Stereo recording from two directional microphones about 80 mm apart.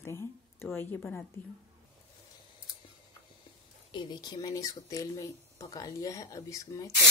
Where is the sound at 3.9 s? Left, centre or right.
Left.